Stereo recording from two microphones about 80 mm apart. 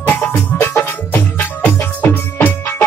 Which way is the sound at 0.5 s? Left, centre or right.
Left.